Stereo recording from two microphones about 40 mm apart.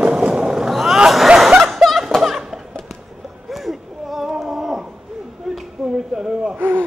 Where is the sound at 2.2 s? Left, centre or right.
Centre.